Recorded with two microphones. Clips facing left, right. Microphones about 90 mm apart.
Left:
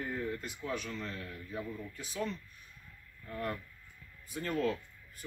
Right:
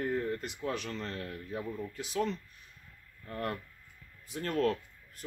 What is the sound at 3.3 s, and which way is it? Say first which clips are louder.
A man's voice: right 2 dB; 65° right (ahead or behind).